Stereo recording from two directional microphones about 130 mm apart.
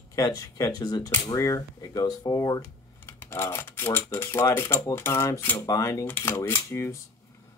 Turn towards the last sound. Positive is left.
turn(degrees=20)  # may be behind; listen again after turning